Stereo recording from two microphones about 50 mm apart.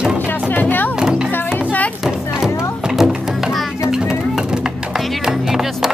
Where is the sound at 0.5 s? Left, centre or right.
Left.